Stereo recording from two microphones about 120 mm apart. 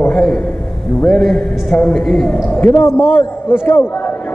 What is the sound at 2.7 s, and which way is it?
A man's voice, 20° left (ahead or behind).